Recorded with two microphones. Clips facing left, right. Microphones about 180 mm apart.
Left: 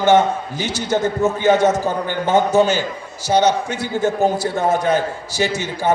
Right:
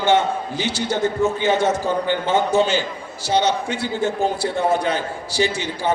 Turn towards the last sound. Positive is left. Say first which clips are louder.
# left 3 dB
turn(degrees=45)  # may be behind; listen again after turning